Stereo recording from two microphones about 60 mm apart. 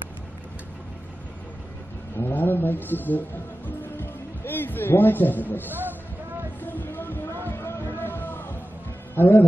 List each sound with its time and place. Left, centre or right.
2.1 s music: left
5.7 s speech: right
6.6 s music: left
9.1 s speech: left